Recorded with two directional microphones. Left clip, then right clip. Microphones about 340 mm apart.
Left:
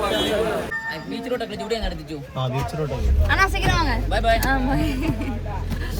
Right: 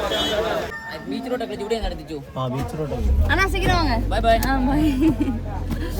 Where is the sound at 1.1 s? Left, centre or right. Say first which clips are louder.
Right 3 dB; centre.